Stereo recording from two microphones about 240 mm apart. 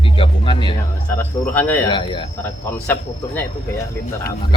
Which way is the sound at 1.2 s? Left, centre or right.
Centre.